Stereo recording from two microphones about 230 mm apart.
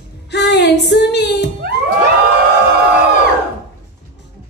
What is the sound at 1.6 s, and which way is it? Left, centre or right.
Music, right.